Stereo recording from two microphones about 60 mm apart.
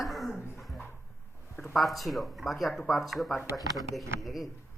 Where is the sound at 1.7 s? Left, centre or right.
Centre.